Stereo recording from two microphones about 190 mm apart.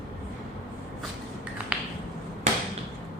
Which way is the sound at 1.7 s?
5° right (ahead or behind).